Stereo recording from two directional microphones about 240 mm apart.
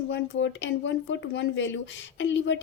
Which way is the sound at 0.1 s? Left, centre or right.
Left.